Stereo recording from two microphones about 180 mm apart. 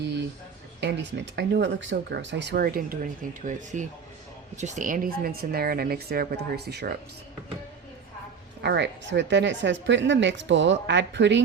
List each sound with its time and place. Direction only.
0.8 s speech: 70° right (ahead or behind)
8.6 s speech: 70° right (ahead or behind)